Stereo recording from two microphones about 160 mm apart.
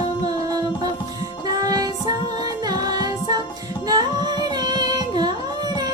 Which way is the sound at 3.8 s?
25° right (ahead or behind).